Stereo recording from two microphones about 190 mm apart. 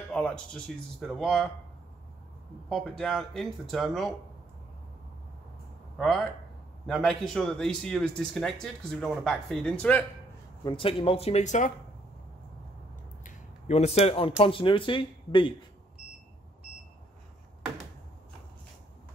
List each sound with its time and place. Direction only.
0.1 s speech: 5° left (ahead or behind)
2.7 s speech: centre (ahead or behind)
5.9 s speech: centre (ahead or behind)
10.6 s speech: 25° left (ahead or behind)
13.2 s a sound: 40° left (ahead or behind)
14.4 s speech: 25° left (ahead or behind)